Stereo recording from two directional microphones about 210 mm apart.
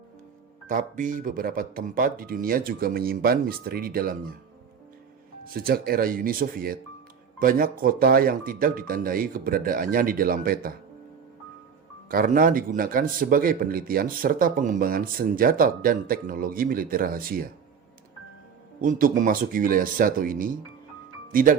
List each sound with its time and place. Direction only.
0.7 s a man's voice: 40° right (ahead or behind)
5.5 s a man's voice: 45° right (ahead or behind)
12.0 s a man's voice: 40° right (ahead or behind)
18.8 s speech: 40° right (ahead or behind)